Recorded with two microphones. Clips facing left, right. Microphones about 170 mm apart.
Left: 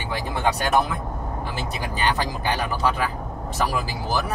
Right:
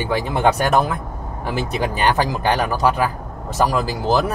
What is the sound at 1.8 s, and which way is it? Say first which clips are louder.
Speech: right 5 dB; 60° right (ahead or behind).